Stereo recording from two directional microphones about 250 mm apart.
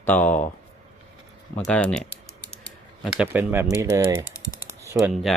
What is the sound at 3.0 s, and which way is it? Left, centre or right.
Speech, centre.